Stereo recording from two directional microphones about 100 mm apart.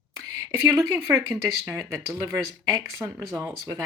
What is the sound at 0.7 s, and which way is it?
Speech, 30° right (ahead or behind).